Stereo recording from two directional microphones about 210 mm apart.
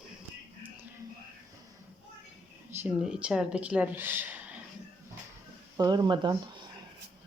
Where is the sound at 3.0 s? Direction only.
5° right (ahead or behind).